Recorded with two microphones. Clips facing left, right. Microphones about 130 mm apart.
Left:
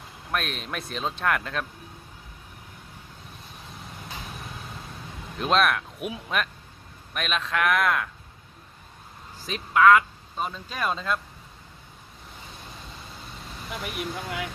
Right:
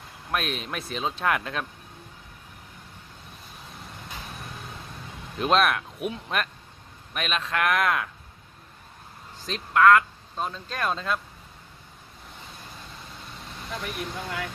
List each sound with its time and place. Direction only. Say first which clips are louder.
0.3 s speech: right 1 dB; centre (ahead or behind)
5.4 s speech: right 1 dB; centre (ahead or behind)
9.5 s speech: even; centre (ahead or behind)
13.8 s speech: left 2 dB; 15° left (ahead or behind)